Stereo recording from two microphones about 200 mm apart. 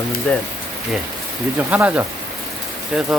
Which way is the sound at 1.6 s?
10° right (ahead or behind).